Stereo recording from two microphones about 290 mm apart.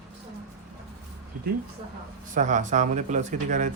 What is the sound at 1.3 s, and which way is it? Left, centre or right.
Speech, right.